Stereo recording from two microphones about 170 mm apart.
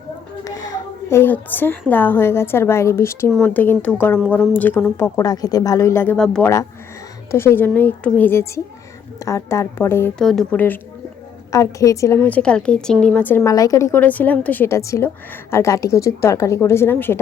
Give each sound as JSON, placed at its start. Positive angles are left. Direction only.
{"t": 0.4, "sound": "a sound", "side_deg": 20}
{"t": 1.9, "sound": "a woman's voice", "side_deg": 10}
{"t": 6.4, "sound": "a woman's voice", "side_deg": 20}